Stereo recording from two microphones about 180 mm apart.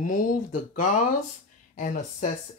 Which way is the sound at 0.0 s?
45° left (ahead or behind).